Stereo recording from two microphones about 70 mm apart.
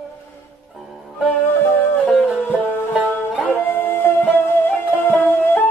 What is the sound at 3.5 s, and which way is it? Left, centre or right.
Music, left.